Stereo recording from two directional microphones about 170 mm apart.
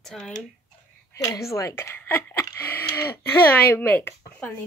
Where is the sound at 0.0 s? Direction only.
Centre (ahead or behind).